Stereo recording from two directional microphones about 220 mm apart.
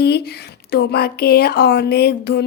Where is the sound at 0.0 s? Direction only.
50° left (ahead or behind).